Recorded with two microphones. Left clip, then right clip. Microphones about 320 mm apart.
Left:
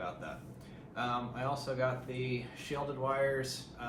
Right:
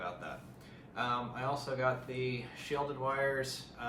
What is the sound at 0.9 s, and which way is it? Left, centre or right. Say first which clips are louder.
Speech: right 1 dB; centre.